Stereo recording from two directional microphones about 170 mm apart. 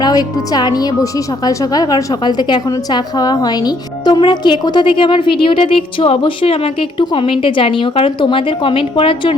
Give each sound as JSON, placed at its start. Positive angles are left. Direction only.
{"t": 0.0, "sound": "a woman's voice", "side_deg": 25}